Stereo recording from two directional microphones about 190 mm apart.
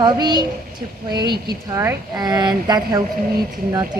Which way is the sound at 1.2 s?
60° right (ahead or behind).